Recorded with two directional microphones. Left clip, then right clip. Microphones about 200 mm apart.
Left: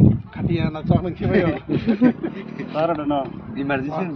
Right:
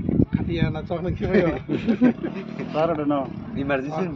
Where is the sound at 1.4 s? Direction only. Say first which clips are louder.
Left 2 dB; 15° left (ahead or behind).